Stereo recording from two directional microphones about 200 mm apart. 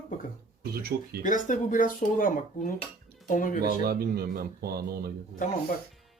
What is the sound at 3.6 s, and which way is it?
Speech, 50° right (ahead or behind).